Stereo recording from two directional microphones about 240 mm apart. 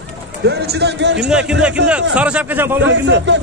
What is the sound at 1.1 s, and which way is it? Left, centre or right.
A man's voice, centre.